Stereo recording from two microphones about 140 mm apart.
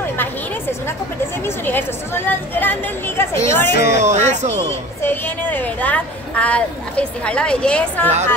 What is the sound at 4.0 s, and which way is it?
Speech, 60° right (ahead or behind).